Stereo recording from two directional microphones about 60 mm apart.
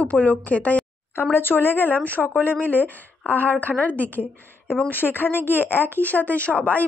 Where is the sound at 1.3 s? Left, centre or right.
Left.